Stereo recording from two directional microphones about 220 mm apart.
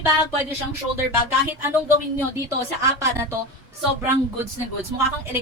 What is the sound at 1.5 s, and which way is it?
A woman's voice, 10° right (ahead or behind).